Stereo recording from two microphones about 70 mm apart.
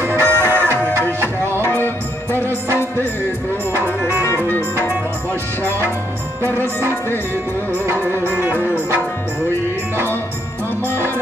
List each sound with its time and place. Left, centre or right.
0.0 s music: right
1.6 s music: left
8.3 s music: right